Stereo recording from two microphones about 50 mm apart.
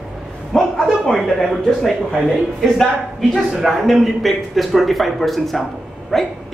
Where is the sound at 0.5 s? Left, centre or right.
Centre.